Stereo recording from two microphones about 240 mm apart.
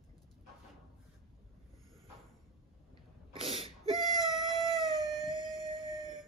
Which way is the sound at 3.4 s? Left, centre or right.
Right.